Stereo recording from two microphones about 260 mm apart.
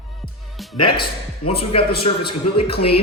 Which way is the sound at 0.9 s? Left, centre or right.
Centre.